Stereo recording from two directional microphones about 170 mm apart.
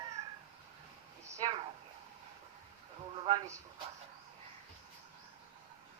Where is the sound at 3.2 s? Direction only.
25° right (ahead or behind).